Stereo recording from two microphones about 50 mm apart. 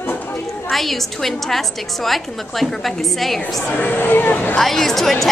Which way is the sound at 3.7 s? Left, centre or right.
Left.